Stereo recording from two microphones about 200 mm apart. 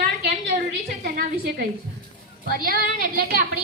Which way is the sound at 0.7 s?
50° right (ahead or behind).